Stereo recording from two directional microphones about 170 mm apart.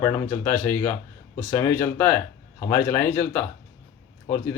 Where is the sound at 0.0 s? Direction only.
15° left (ahead or behind).